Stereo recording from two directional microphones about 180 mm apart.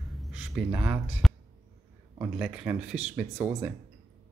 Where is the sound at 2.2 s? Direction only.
10° right (ahead or behind).